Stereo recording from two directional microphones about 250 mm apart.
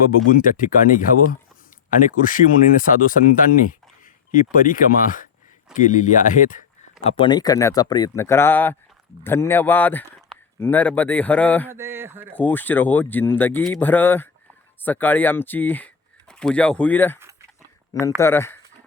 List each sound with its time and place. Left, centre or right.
0.3 s speech: left
7.0 s speech: centre
11.7 s speech: centre
12.3 s speech: centre
18.2 s speech: centre